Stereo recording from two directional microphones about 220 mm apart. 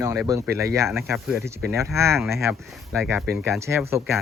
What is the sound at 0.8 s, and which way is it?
Speech, centre (ahead or behind).